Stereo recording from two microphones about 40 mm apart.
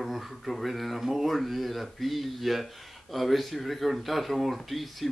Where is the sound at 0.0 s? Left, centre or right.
Centre.